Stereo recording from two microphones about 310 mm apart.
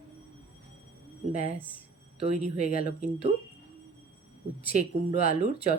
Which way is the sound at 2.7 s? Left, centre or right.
Left.